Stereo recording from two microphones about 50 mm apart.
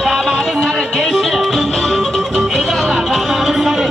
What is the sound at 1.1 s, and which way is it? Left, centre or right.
Music, centre.